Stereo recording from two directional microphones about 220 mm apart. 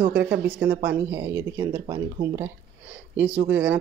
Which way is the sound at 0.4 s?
5° right (ahead or behind).